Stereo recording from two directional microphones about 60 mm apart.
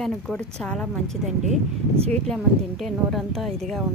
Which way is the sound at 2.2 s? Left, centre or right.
Centre.